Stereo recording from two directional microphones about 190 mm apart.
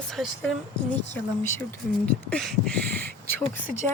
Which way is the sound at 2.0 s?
5° left (ahead or behind).